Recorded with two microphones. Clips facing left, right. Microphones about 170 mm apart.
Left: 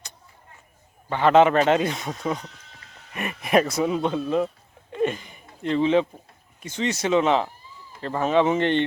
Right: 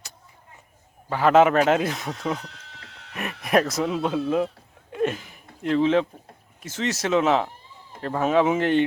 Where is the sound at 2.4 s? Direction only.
75° right (ahead or behind).